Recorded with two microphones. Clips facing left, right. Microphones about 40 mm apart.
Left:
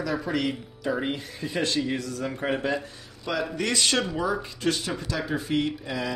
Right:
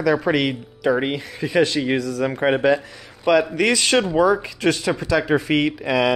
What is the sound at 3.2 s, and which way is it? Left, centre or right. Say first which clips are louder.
Speech: right 11 dB; right.